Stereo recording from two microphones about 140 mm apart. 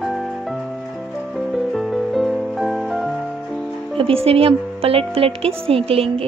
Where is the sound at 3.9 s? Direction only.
40° right (ahead or behind).